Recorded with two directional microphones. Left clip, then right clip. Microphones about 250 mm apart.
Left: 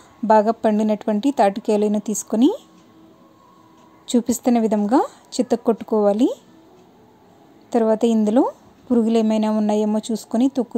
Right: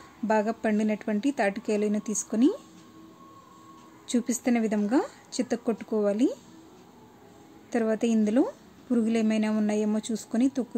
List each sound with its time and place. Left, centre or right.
0.3 s a woman's voice: left
4.1 s a woman's voice: centre
7.7 s a woman's voice: centre